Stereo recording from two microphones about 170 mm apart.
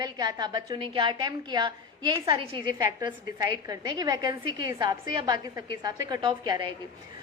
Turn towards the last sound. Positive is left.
turn(degrees=-25)  # may be behind; listen again after turning